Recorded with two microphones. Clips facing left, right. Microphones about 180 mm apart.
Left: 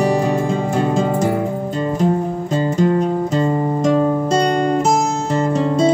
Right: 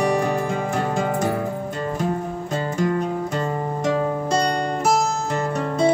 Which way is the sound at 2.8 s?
25° left (ahead or behind).